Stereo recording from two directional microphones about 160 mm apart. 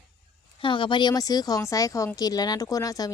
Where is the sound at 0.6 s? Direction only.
30° left (ahead or behind).